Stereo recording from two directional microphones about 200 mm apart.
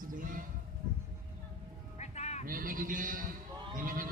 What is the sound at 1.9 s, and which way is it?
Music, 35° left (ahead or behind).